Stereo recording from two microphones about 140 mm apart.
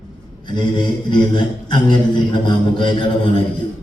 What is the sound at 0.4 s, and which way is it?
A man's voice, 30° left (ahead or behind).